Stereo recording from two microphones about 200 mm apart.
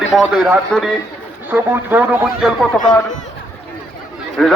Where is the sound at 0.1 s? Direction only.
Centre (ahead or behind).